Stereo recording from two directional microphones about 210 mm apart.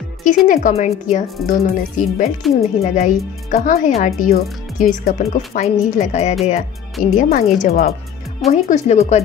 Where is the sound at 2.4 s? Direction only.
Centre (ahead or behind).